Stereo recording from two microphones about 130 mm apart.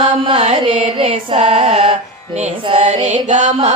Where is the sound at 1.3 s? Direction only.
60° right (ahead or behind).